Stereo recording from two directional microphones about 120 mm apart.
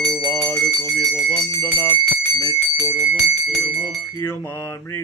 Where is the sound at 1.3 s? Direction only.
30° left (ahead or behind).